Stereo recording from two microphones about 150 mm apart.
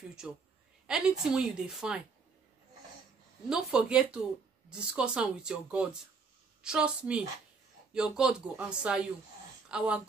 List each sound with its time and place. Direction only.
0.8 s a woman's voice: 5° right (ahead or behind)
3.4 s a woman's voice: 5° right (ahead or behind)